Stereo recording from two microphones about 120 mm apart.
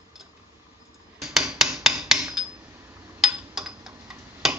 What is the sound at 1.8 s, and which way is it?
Filing, 5° right (ahead or behind).